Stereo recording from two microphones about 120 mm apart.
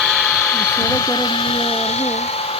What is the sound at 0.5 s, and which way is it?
Speech, 25° left (ahead or behind).